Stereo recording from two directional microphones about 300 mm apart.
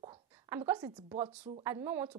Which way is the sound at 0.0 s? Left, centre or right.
Centre.